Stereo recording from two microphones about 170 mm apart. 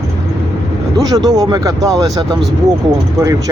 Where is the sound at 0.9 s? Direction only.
20° right (ahead or behind).